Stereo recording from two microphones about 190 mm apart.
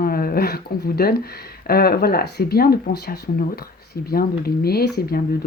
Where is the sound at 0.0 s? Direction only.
50° left (ahead or behind).